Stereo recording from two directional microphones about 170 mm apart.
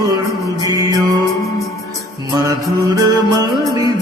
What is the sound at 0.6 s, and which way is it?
Music, 20° right (ahead or behind).